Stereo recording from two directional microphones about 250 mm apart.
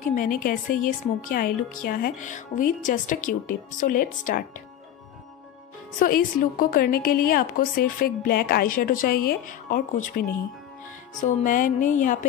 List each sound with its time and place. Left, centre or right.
0.0 s a woman's voice: left
5.9 s a woman's voice: left